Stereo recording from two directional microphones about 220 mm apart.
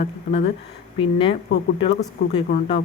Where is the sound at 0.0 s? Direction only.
30° left (ahead or behind).